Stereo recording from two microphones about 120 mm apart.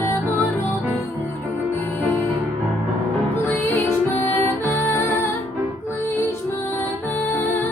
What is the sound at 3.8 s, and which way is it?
Music, 20° left (ahead or behind).